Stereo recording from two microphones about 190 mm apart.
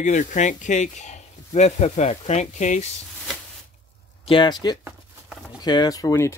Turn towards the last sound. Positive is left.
turn(degrees=15)  # may be behind; listen again after turning